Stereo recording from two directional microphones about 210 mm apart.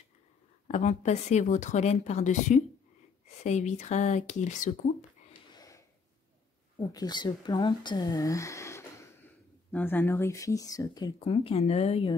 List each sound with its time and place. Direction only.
0.7 s speech: 30° left (ahead or behind)
5.6 s a sound: 15° left (ahead or behind)
6.8 s speech: 20° left (ahead or behind)